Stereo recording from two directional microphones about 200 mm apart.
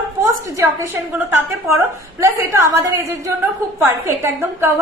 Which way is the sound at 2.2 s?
15° right (ahead or behind).